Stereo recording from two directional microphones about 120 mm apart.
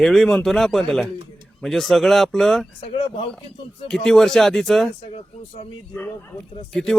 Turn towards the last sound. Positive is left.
turn(degrees=5)  # may be behind; listen again after turning